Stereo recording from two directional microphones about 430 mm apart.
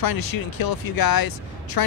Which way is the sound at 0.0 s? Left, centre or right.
Left.